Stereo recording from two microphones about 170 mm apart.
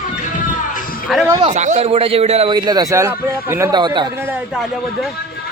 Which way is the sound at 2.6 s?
25° right (ahead or behind).